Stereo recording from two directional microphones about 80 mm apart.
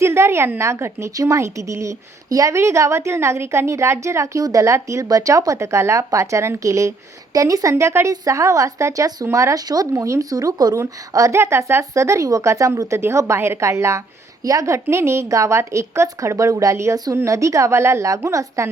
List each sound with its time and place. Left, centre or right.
0.0 s a woman's voice: right
10.8 s a woman's voice: right